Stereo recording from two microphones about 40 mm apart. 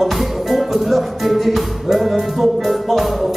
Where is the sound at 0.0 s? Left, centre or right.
Centre.